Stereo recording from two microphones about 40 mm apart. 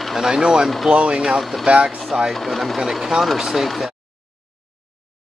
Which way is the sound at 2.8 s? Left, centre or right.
Centre.